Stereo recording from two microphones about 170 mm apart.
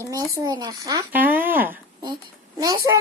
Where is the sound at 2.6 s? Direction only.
25° right (ahead or behind).